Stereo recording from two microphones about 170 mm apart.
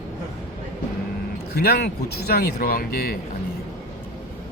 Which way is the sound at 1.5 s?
70° left (ahead or behind).